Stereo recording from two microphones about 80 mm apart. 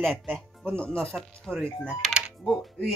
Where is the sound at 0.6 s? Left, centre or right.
Centre.